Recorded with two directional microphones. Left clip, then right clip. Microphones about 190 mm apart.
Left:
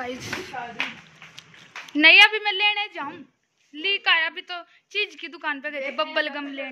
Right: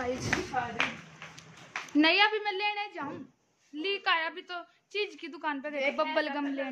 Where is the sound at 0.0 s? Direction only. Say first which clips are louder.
Even; centre (ahead or behind).